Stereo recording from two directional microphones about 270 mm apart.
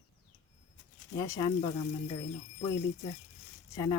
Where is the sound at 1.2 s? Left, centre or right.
Centre.